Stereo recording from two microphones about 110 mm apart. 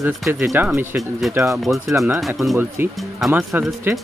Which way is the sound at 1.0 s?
Centre (ahead or behind).